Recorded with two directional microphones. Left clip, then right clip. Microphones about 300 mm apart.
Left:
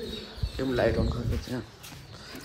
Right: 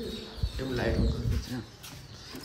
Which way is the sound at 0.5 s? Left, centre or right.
Centre.